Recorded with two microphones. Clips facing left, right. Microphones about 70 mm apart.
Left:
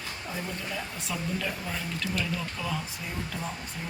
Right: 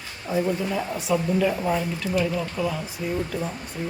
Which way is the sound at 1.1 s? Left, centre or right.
Centre.